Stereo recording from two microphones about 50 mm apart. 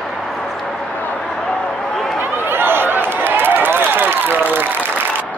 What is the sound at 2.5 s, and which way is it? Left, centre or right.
Run, right.